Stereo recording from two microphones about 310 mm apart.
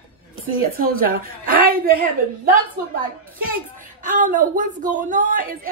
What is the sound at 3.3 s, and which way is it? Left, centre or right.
Speech, right.